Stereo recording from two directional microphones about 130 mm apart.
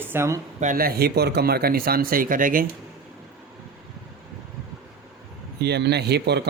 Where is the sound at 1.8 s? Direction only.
90° right.